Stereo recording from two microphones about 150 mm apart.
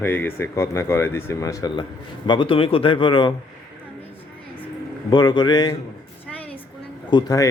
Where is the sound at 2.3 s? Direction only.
35° left (ahead or behind).